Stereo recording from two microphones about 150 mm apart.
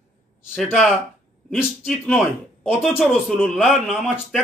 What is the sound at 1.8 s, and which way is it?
Speech, centre (ahead or behind).